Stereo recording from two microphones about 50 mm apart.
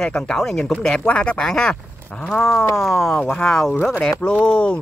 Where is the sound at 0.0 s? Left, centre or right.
Centre.